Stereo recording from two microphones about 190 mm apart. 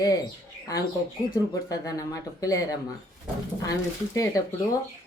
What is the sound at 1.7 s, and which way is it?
Speech, 20° left (ahead or behind).